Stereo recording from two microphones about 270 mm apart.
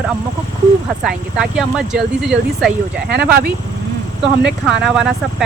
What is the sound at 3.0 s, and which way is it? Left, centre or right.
Speech, right.